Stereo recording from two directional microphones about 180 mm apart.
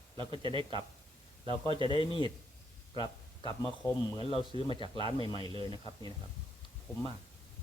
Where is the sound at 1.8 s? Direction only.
30° left (ahead or behind).